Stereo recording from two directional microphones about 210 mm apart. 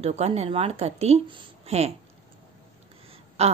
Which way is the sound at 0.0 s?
30° right (ahead or behind).